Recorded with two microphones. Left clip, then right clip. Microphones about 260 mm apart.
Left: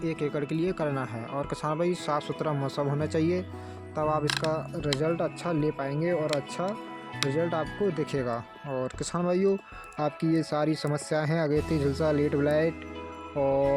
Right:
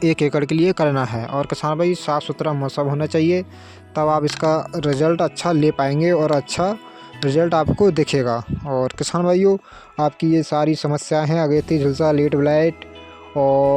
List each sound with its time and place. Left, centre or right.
0.0 s speech: right
13.3 s music: right